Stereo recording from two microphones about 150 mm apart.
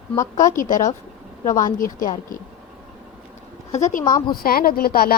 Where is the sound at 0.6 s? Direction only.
60° left (ahead or behind).